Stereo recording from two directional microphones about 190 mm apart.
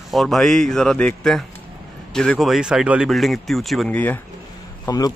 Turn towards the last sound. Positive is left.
turn(degrees=20)  # may be behind; listen again after turning